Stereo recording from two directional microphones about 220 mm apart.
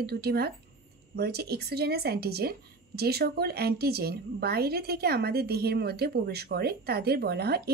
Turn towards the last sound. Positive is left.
turn(degrees=-45)  # may be behind; listen again after turning